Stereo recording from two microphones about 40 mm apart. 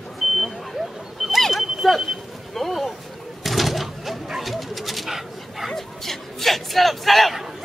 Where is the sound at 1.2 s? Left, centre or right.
Centre.